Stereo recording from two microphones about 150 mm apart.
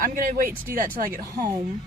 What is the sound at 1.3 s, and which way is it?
Speech, 25° right (ahead or behind).